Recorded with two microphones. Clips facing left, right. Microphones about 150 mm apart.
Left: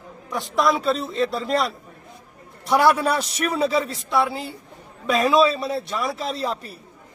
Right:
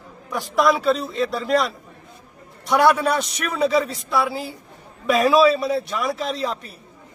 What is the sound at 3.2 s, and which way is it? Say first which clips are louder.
Speech: left 2 dB; 30° left (ahead or behind).